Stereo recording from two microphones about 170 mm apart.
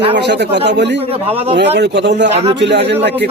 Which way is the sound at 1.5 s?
90° right.